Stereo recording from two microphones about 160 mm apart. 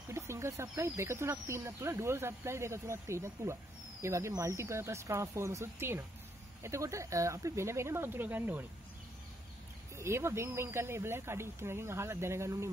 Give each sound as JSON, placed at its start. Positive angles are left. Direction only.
{"t": 0.1, "sound": "speech", "side_deg": -15}
{"t": 9.9, "sound": "speech", "side_deg": -15}